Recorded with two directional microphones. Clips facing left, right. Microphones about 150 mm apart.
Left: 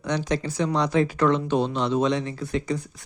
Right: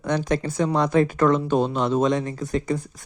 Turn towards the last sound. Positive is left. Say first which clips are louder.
# right 2 dB
turn(degrees=-45)  # may be behind; listen again after turning